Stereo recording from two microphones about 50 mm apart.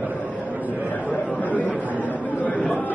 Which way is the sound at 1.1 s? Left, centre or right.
Left.